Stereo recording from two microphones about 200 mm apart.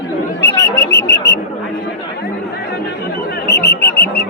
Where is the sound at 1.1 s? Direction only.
60° left (ahead or behind).